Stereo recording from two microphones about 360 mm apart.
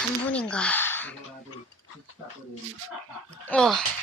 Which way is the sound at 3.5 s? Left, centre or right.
Centre.